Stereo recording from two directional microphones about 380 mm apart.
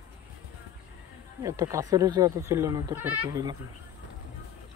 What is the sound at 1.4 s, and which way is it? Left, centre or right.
Speech, centre.